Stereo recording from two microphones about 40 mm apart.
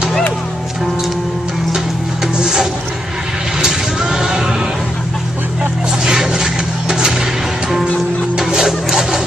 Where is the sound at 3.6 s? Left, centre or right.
Centre.